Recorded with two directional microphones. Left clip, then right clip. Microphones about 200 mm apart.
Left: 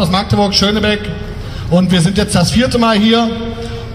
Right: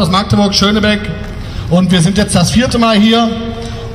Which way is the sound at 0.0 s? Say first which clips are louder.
Right 1 dB; 15° right (ahead or behind).